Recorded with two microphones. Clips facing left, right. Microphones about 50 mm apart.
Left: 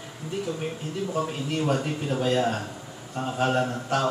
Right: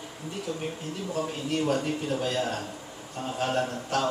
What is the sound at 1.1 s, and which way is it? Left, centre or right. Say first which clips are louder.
Speech: even; centre.